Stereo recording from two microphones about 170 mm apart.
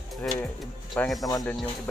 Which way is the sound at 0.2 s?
Centre (ahead or behind).